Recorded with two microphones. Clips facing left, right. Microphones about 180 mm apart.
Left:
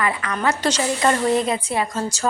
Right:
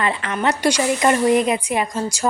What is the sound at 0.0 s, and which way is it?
Speech, 25° right (ahead or behind).